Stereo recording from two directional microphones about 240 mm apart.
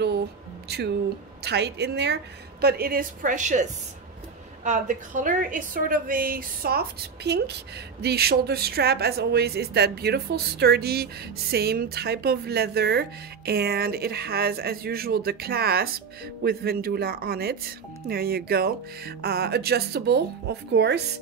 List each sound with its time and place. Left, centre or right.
0.7 s a woman's voice: right
4.6 s speech: right